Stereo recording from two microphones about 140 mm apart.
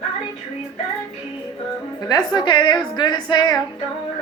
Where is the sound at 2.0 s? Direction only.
30° left (ahead or behind).